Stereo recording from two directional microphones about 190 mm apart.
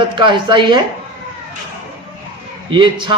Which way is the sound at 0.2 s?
25° right (ahead or behind).